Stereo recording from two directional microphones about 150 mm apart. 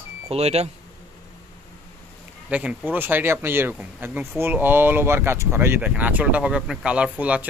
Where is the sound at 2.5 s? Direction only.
10° right (ahead or behind).